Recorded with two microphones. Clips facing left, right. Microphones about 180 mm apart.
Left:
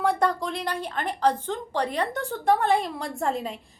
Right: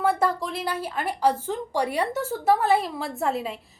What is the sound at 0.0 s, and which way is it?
A woman's voice, 5° right (ahead or behind).